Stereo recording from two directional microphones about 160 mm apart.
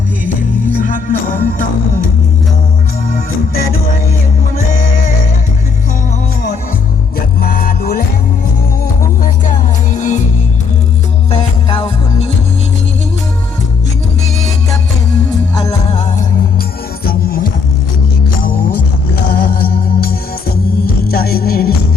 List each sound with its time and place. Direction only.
0.8 s music: 55° left (ahead or behind)
7.4 s music: 65° left (ahead or behind)
9.2 s music: 55° left (ahead or behind)
11.3 s music: 40° left (ahead or behind)
15.9 s music: 45° left (ahead or behind)
17.1 s music: 65° left (ahead or behind)
19.3 s music: 65° left (ahead or behind)